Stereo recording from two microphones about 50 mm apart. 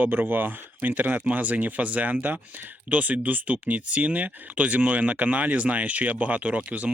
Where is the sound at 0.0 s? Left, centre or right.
Right.